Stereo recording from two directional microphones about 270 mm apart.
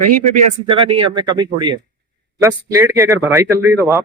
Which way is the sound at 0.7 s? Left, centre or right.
Centre.